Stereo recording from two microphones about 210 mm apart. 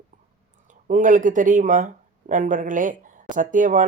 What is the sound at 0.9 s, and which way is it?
Speech, 40° right (ahead or behind).